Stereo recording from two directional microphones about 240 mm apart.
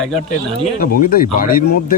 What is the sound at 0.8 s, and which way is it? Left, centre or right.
Speech, left.